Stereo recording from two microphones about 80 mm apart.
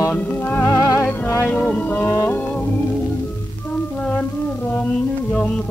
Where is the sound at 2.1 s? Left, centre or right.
Left.